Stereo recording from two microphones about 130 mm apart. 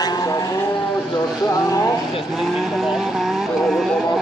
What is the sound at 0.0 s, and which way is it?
Vehicle, 30° left (ahead or behind).